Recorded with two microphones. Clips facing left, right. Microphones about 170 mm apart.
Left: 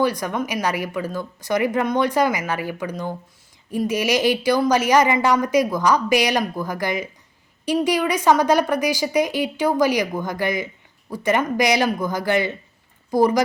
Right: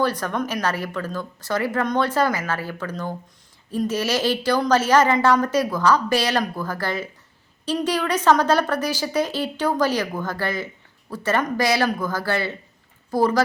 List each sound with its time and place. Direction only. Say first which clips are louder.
0.0 s speech: left 1 dB; 10° left (ahead or behind)